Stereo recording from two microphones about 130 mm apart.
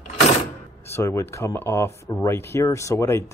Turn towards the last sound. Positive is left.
turn(degrees=20)  # may be behind; listen again after turning